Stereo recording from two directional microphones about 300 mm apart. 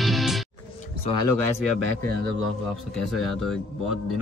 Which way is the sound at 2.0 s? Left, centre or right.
Right.